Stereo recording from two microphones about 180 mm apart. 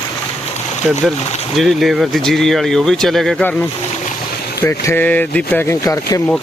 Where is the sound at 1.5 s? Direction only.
Centre (ahead or behind).